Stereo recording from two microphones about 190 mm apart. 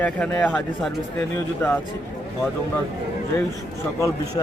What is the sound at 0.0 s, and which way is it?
Speech, 10° left (ahead or behind).